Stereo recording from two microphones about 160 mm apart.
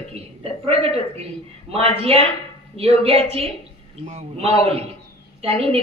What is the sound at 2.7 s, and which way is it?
A woman's voice, 40° right (ahead or behind).